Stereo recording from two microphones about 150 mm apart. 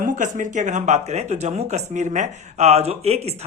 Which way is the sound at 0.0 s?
60° right (ahead or behind).